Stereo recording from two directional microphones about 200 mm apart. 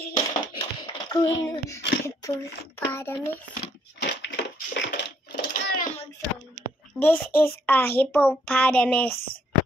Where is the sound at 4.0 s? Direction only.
60° left (ahead or behind).